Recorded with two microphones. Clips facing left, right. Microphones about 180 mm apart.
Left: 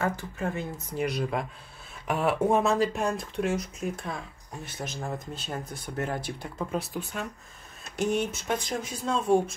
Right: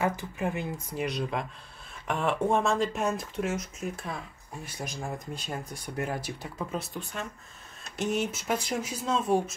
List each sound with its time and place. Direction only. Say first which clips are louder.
0.0 s speech: right 1 dB; 15° right (ahead or behind)
0.7 s speech: left 2 dB; centre (ahead or behind)
5.2 s speech: left 1 dB; 10° right (ahead or behind)